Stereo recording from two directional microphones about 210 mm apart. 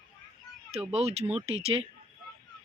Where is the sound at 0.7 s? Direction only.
30° right (ahead or behind).